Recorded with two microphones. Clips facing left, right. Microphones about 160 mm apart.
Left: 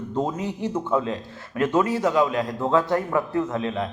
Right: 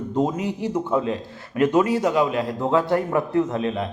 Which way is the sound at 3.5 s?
20° right (ahead or behind).